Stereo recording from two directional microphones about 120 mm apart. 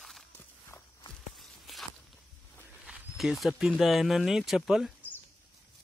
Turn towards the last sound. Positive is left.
turn(degrees=-5)  # may be behind; listen again after turning